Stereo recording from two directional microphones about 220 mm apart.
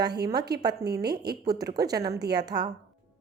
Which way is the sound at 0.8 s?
50° right (ahead or behind).